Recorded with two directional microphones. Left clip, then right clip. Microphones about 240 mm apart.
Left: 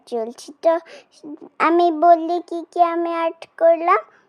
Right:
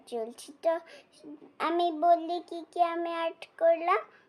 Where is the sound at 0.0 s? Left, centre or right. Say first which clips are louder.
Left 10 dB; left.